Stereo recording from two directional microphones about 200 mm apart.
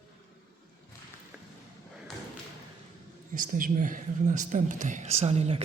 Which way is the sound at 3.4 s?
45° right (ahead or behind).